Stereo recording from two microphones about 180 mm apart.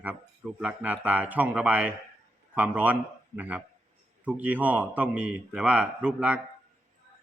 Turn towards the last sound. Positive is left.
turn(degrees=-5)  # may be behind; listen again after turning